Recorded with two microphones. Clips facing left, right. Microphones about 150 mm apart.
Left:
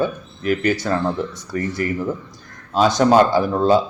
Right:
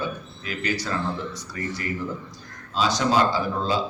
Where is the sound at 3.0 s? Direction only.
55° left (ahead or behind).